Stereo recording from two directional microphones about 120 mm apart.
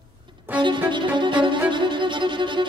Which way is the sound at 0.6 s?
40° right (ahead or behind).